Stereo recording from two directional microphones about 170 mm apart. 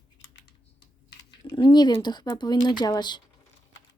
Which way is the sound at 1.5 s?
30° left (ahead or behind).